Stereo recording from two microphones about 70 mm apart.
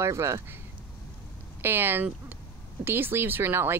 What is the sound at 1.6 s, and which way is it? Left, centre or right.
Speech, right.